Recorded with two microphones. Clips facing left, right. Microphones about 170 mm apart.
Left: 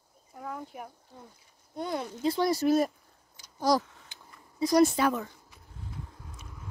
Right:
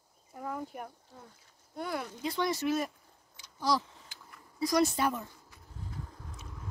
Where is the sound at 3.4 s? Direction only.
45° left (ahead or behind).